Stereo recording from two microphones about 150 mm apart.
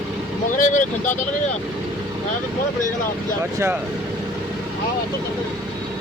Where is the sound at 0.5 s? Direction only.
60° left (ahead or behind).